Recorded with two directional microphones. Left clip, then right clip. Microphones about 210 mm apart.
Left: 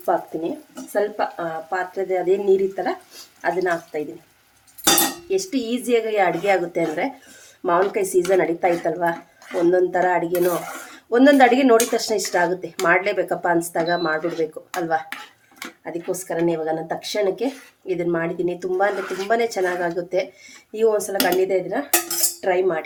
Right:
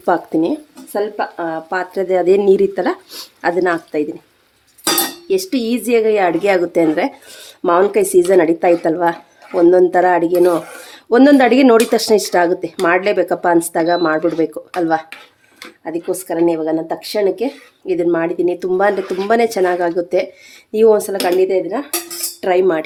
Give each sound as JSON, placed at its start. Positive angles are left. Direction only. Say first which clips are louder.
{"t": 0.9, "sound": "speech", "louder": "right 3 dB", "side_deg": -40}
{"t": 5.3, "sound": "speech", "louder": "right 6 dB", "side_deg": -40}
{"t": 22.4, "sound": "cutlery", "louder": "right 7 dB", "side_deg": -40}